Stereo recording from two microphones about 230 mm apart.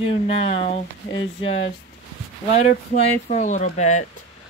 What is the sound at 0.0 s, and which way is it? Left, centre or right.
Speech, left.